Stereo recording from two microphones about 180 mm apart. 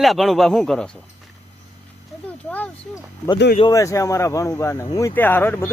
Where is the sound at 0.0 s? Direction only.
Centre (ahead or behind).